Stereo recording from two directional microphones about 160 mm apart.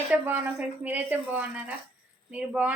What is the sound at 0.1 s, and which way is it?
Speech, 10° right (ahead or behind).